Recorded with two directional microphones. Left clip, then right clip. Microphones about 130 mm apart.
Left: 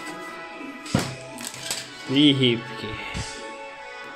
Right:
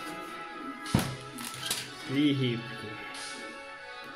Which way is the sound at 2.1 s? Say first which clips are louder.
Left 10 dB; 50° left (ahead or behind).